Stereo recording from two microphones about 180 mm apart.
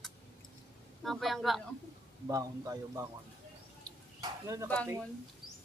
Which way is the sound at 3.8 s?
20° right (ahead or behind).